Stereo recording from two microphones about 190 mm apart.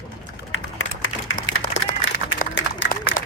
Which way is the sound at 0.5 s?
90° left.